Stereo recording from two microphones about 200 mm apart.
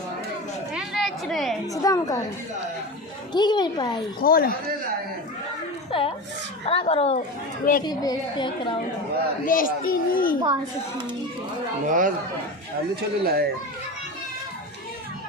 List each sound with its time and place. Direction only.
0.7 s a sound: centre (ahead or behind)
1.6 s a woman's voice: 15° left (ahead or behind)
3.3 s a woman's voice: 20° left (ahead or behind)
4.2 s a child's voice: 45° left (ahead or behind)
5.9 s a woman's voice: 25° left (ahead or behind)
7.2 s a child's voice: 45° left (ahead or behind)
7.9 s a woman's voice: 20° left (ahead or behind)
9.5 s a child's voice: 45° left (ahead or behind)
11.9 s speech: 40° right (ahead or behind)